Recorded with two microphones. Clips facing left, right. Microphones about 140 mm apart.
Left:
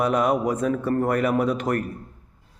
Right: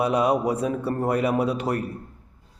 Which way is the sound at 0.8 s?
20° right (ahead or behind).